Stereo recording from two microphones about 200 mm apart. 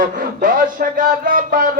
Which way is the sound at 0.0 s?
45° right (ahead or behind).